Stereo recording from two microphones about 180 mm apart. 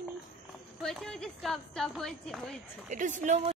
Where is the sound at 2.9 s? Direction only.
45° right (ahead or behind).